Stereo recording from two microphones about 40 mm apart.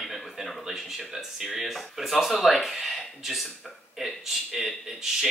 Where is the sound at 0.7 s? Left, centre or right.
Centre.